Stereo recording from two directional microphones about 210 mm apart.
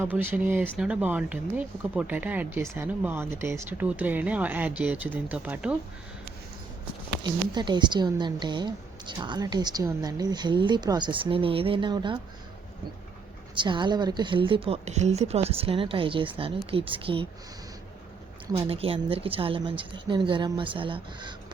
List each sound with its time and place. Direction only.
0.0 s speech: 10° right (ahead or behind)
7.2 s a woman's voice: 20° right (ahead or behind)
13.6 s a woman's voice: 20° right (ahead or behind)
18.5 s a woman's voice: 25° right (ahead or behind)